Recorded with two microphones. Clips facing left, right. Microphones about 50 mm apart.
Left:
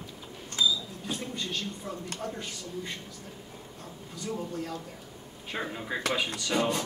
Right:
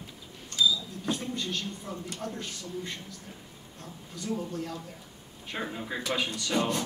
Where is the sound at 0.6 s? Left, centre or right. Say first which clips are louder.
Right 1 dB; centre.